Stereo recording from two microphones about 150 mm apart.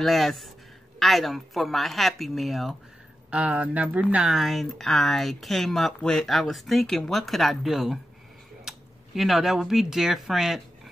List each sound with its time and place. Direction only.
0.0 s speech: centre (ahead or behind)